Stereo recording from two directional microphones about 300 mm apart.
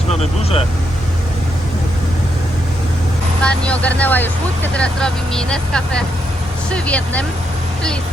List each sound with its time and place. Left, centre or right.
0.1 s speech: left
3.4 s speech: centre